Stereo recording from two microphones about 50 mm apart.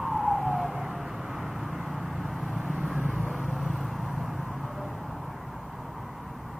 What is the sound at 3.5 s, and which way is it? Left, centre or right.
Vehicle, centre.